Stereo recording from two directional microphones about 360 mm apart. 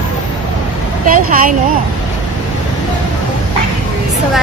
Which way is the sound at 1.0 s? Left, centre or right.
Right.